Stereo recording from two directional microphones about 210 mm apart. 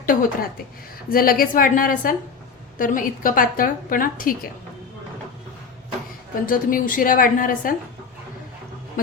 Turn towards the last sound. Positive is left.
turn(degrees=40)  # may be behind; listen again after turning